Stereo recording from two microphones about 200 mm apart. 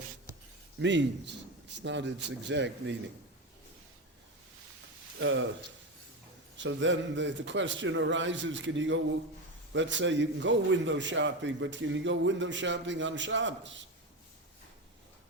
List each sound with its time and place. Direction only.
0.8 s a man's voice: 60° right (ahead or behind)
5.2 s a man's voice: 70° right (ahead or behind)
6.6 s a man's voice: 65° right (ahead or behind)